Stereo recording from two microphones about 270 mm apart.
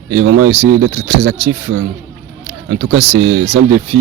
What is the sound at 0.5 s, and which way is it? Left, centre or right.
Speech, right.